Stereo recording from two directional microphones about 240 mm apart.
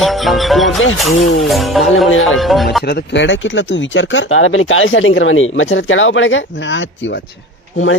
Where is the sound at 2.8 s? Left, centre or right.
Left.